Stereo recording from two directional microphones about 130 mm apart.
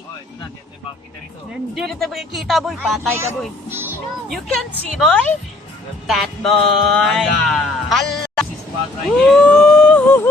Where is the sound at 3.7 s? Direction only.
15° right (ahead or behind).